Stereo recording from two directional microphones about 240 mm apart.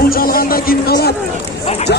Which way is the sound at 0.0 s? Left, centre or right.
Left.